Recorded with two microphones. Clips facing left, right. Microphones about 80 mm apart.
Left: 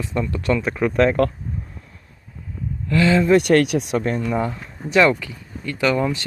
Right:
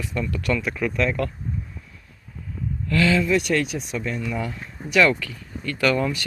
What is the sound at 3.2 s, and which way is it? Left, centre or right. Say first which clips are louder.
Speech: left 7 dB; left.